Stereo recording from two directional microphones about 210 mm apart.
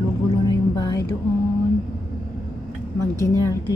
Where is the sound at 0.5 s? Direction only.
20° left (ahead or behind).